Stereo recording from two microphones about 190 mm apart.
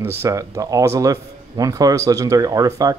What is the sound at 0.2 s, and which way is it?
A man's voice, 15° right (ahead or behind).